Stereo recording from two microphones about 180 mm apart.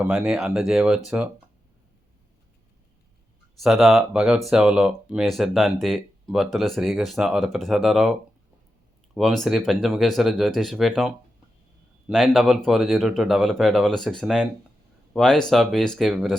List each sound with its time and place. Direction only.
0.0 s speech: 5° right (ahead or behind)
3.6 s speech: centre (ahead or behind)
9.1 s speech: centre (ahead or behind)